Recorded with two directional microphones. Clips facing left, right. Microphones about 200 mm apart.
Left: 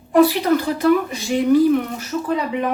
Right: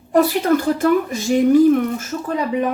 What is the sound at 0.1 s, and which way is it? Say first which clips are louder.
A woman's voice: left 1 dB; 45° right (ahead or behind).